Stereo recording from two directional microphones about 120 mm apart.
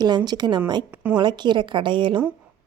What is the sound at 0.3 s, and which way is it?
Speech, 35° right (ahead or behind).